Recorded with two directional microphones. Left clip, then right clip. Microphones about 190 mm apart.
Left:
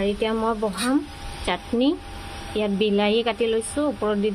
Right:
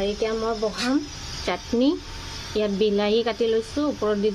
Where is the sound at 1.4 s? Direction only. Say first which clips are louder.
Even; 5° left (ahead or behind).